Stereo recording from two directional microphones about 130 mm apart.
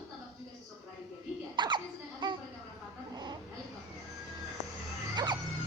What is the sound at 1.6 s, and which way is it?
Laughter, 35° right (ahead or behind).